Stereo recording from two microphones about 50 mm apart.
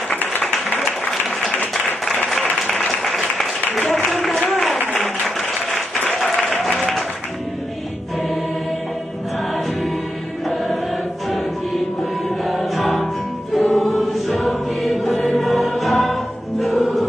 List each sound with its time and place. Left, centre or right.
2.9 s applause: centre
4.5 s a sound: centre
5.0 s applause: centre
11.2 s music: centre